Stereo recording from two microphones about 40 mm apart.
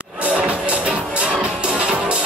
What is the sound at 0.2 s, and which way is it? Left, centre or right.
Music, right.